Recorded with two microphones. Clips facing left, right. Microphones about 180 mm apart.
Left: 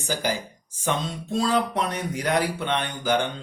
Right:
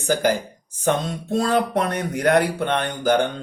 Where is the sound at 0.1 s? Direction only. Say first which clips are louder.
Right 7 dB; 55° right (ahead or behind).